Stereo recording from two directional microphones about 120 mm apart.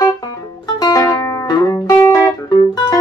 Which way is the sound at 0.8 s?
30° left (ahead or behind).